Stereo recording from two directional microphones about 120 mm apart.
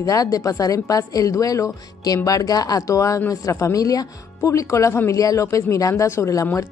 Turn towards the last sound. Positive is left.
turn(degrees=25)  # may be behind; listen again after turning